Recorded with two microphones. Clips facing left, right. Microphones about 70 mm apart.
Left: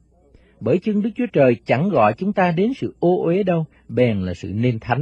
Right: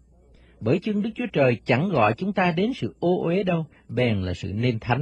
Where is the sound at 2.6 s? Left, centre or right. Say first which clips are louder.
Left 5 dB; left.